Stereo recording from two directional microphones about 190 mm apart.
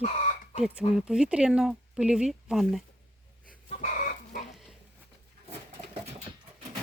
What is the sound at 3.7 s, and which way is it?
Chicken, 40° left (ahead or behind).